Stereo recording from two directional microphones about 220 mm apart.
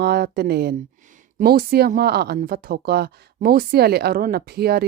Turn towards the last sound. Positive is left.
turn(degrees=-45)  # may be behind; listen again after turning